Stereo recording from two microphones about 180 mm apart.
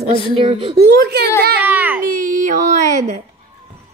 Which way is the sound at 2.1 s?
45° right (ahead or behind).